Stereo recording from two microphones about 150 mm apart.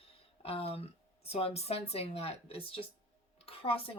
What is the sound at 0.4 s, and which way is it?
Speech, 40° left (ahead or behind).